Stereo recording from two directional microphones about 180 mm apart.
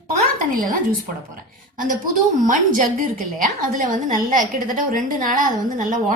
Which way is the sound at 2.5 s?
50° right (ahead or behind).